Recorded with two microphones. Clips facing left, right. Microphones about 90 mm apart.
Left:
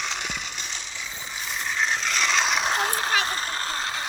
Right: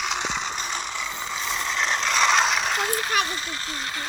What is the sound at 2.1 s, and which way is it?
Mechanisms, 45° right (ahead or behind).